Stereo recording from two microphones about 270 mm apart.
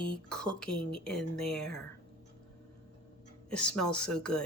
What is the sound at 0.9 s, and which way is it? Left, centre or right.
Speech, centre.